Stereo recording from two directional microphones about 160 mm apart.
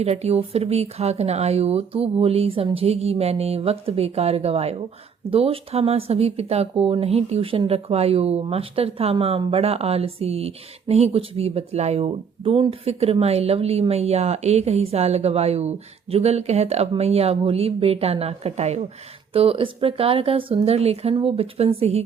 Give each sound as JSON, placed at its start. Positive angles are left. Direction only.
{"t": 0.0, "sound": "speech", "side_deg": -40}